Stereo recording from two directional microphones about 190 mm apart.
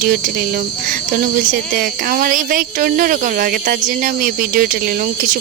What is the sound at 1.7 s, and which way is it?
Speech, 50° right (ahead or behind).